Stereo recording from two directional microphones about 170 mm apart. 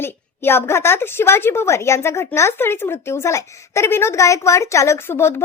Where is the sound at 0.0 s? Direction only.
15° left (ahead or behind).